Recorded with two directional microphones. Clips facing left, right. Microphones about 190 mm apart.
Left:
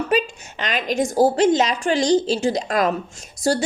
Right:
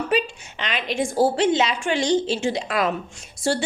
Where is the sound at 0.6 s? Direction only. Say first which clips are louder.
Left 3 dB; 45° left (ahead or behind).